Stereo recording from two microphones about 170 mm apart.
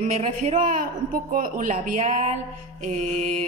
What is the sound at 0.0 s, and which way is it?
A man's voice, 40° right (ahead or behind).